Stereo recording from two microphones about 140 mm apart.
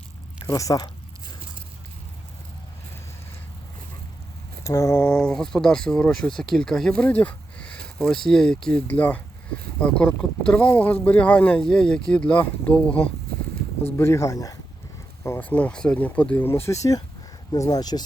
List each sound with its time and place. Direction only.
0.4 s speech: 25° left (ahead or behind)
4.6 s speech: 20° left (ahead or behind)
4.9 s speech: 5° left (ahead or behind)
13.9 s speech: 20° left (ahead or behind)